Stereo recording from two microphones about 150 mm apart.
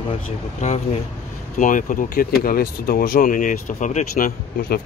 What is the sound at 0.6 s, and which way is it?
Speech, 55° left (ahead or behind).